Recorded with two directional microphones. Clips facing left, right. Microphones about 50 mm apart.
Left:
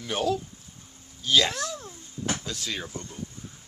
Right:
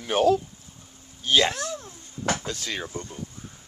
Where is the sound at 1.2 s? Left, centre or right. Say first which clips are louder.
Right 2 dB; centre.